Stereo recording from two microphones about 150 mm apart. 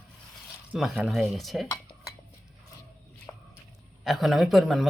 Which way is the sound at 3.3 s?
20° left (ahead or behind).